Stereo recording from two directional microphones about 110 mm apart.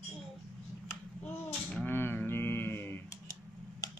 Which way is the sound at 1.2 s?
15° left (ahead or behind).